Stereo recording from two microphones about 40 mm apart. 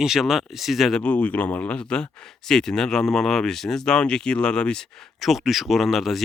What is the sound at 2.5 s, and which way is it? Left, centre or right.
Speech, centre.